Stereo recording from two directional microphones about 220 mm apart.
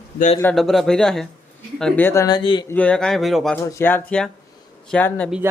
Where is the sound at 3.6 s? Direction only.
15° left (ahead or behind).